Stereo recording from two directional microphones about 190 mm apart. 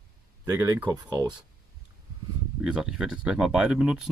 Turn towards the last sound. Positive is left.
turn(degrees=-5)  # may be behind; listen again after turning